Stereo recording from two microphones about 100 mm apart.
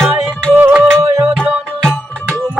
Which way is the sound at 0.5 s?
15° right (ahead or behind).